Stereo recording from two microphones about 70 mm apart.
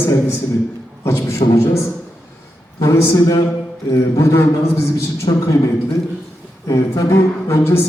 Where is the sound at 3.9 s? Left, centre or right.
Left.